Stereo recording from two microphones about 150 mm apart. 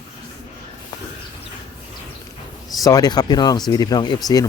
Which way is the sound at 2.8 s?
25° left (ahead or behind).